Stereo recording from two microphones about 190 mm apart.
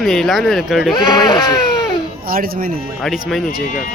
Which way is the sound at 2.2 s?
50° right (ahead or behind).